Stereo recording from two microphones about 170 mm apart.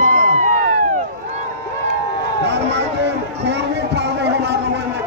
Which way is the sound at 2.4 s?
85° right.